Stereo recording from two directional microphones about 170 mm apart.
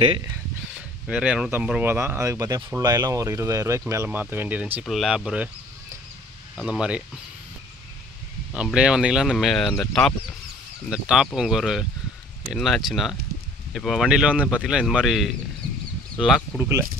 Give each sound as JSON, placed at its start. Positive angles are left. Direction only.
{"t": 0.7, "sound": "speech", "side_deg": -5}
{"t": 6.5, "sound": "speech", "side_deg": -5}
{"t": 8.5, "sound": "speech", "side_deg": -5}
{"t": 16.5, "sound": "speech", "side_deg": -15}